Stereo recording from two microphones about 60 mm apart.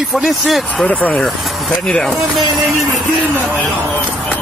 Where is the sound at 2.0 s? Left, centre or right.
Centre.